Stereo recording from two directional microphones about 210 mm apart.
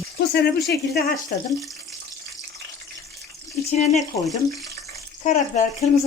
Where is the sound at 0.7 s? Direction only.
50° left (ahead or behind).